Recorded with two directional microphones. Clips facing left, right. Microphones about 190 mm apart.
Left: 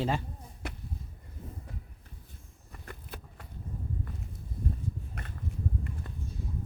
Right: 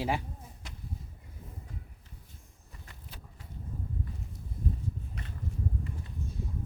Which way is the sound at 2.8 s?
55° left (ahead or behind).